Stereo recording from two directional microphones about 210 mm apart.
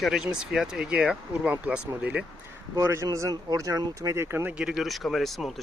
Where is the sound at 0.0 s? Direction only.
5° right (ahead or behind).